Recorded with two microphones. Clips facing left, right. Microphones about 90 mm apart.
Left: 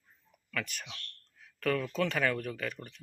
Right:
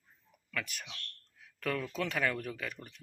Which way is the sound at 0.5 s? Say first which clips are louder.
Left 2 dB; 5° right (ahead or behind).